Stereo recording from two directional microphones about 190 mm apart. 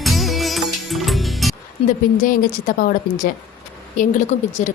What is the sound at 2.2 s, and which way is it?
A woman's voice, 45° left (ahead or behind).